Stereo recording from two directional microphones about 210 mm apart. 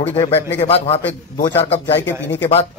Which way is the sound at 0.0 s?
30° left (ahead or behind).